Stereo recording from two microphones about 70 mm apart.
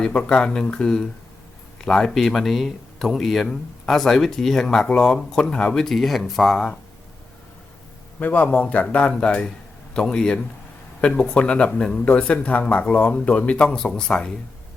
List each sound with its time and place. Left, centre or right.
0.0 s speech: centre
8.2 s speech: left